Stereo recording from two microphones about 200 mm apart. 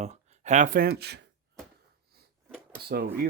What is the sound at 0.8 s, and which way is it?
Speech, 55° right (ahead or behind).